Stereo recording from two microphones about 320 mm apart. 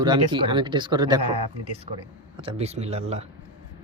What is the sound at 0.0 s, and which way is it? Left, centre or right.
Speech, centre.